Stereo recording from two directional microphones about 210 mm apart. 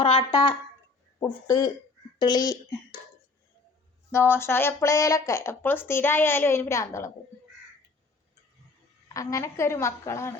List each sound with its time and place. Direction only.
0.0 s speech: 25° left (ahead or behind)
4.1 s speech: 10° left (ahead or behind)
9.1 s speech: 15° left (ahead or behind)